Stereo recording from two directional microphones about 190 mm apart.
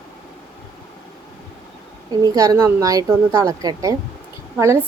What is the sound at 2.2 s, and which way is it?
A woman's voice, 20° right (ahead or behind).